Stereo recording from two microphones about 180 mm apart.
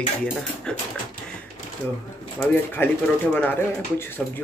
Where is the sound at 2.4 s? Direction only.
10° left (ahead or behind).